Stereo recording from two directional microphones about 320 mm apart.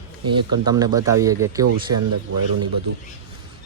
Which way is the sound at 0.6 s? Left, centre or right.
Centre.